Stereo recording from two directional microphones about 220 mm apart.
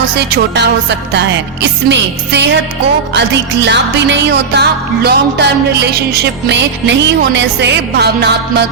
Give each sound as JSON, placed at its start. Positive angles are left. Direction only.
{"t": 0.2, "sound": "music", "side_deg": -50}